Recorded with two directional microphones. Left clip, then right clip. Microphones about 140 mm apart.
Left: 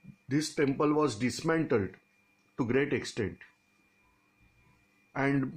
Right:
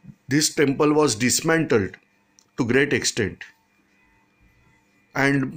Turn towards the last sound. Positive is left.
turn(degrees=-15)  # may be behind; listen again after turning